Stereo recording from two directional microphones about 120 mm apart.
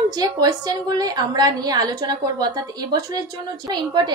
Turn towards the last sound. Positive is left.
turn(degrees=-35)  # may be behind; listen again after turning